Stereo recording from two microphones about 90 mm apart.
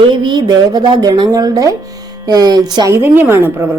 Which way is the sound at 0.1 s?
55° right (ahead or behind).